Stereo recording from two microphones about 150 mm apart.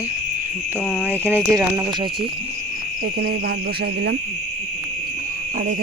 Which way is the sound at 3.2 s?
90° right.